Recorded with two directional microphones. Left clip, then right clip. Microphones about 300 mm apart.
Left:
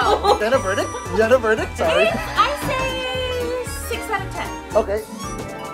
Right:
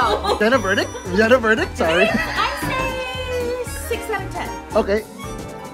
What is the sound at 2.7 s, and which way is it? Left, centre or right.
Music, centre.